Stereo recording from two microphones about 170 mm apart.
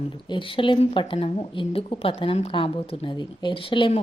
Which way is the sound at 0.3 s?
30° left (ahead or behind).